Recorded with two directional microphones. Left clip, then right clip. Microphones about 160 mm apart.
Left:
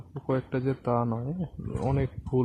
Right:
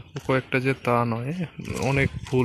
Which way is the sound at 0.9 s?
20° right (ahead or behind).